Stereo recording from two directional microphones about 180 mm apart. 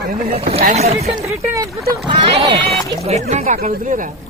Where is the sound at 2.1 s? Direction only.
30° right (ahead or behind); by 4.1 s 45° right (ahead or behind).